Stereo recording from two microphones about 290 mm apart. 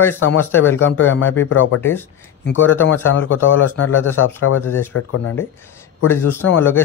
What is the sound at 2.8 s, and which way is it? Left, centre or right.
Speech, left.